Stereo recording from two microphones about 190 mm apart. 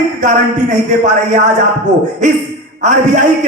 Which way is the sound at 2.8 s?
40° right (ahead or behind).